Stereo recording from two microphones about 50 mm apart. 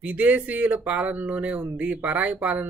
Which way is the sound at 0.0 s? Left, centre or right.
Right.